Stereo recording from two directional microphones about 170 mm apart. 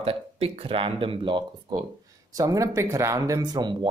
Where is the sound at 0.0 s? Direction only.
35° right (ahead or behind).